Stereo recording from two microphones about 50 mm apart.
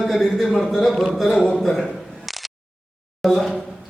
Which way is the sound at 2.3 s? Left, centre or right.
Centre.